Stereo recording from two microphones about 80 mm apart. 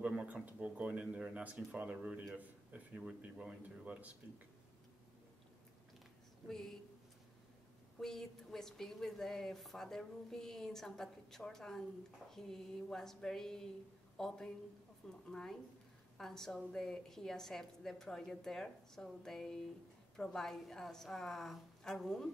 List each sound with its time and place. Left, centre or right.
0.0 s a man's voice: centre
6.5 s a woman's voice: centre
8.0 s a woman's voice: centre